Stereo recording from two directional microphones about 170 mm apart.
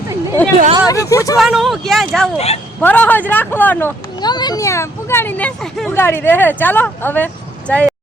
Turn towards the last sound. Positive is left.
turn(degrees=10)  # may be behind; listen again after turning